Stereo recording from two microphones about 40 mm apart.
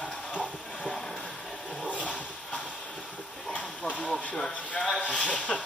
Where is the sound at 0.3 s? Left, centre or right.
Left.